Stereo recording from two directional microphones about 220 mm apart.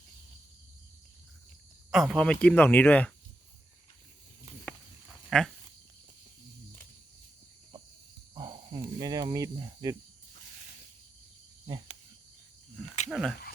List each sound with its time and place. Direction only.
1.9 s speech: centre (ahead or behind)
5.3 s goat: centre (ahead or behind)
8.4 s speech: 20° right (ahead or behind)
13.1 s speech: centre (ahead or behind)